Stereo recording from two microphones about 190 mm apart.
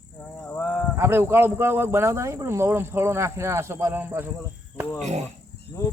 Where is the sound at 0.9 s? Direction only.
15° right (ahead or behind).